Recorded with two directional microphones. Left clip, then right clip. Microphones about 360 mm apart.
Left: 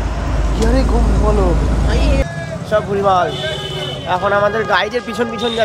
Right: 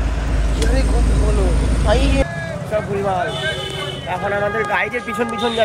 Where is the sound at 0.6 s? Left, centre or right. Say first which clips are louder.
Left 5 dB; left.